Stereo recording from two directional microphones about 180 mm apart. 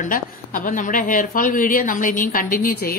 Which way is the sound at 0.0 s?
50° left (ahead or behind).